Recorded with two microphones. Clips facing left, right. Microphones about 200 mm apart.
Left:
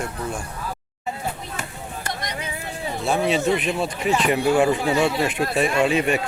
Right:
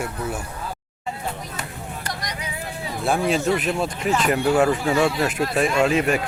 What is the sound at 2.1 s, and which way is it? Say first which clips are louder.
Vehicle: left 2 dB; 25° left (ahead or behind).